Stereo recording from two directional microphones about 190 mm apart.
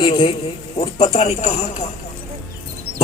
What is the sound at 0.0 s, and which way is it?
A man's voice, 25° left (ahead or behind).